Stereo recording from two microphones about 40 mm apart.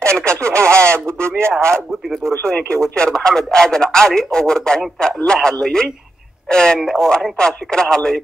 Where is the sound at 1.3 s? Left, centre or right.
Right.